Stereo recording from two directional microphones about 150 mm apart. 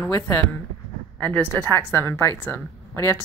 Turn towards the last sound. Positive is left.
turn(degrees=15)  # may be behind; listen again after turning